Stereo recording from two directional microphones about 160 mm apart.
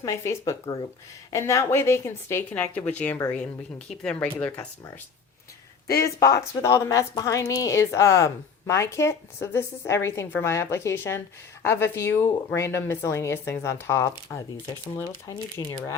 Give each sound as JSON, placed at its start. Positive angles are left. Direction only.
{"t": 0.0, "sound": "a woman's voice", "side_deg": 20}
{"t": 6.0, "sound": "a woman's voice", "side_deg": 20}